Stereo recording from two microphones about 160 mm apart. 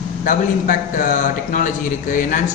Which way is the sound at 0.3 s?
55° left (ahead or behind).